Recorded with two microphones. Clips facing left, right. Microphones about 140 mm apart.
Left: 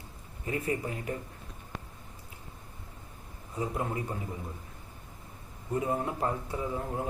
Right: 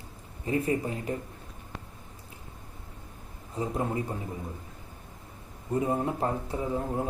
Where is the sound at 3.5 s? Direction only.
30° right (ahead or behind).